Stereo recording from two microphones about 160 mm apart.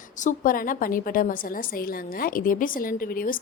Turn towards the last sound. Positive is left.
turn(degrees=60)  # may be behind; listen again after turning